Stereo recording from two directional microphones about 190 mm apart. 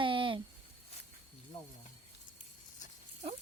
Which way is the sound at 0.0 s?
25° right (ahead or behind).